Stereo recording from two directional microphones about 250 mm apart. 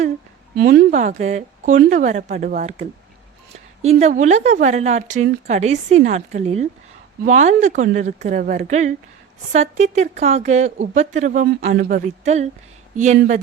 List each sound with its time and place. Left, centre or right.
0.5 s speech: right
4.0 s speech: right